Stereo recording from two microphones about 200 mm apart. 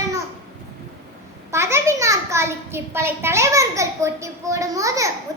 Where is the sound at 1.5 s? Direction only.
15° right (ahead or behind).